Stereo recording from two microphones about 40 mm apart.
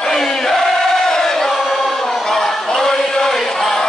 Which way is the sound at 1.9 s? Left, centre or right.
Centre.